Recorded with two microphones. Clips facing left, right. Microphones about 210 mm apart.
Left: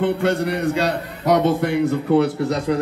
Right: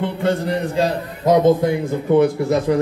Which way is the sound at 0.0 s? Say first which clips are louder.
Left 1 dB; 70° left (ahead or behind).